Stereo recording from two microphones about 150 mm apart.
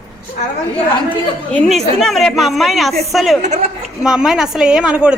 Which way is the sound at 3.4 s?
50° right (ahead or behind).